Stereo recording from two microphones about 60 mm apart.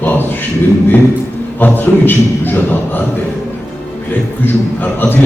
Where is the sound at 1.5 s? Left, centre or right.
Left.